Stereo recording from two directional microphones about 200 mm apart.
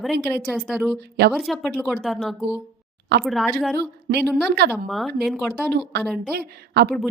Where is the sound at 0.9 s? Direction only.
55° right (ahead or behind).